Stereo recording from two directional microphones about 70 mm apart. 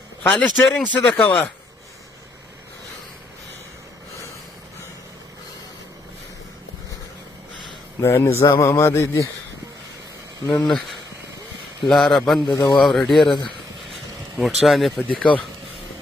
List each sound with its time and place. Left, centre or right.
0.3 s speech: centre
8.0 s speech: left
8.4 s speech: left
10.4 s speech: left
11.8 s a man's voice: centre
13.2 s speech: left
14.4 s a man's voice: centre
14.9 s speech: centre